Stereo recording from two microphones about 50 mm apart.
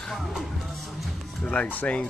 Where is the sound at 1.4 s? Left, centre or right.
Left.